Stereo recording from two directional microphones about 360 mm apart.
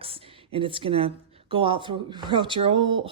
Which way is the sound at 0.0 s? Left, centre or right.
Centre.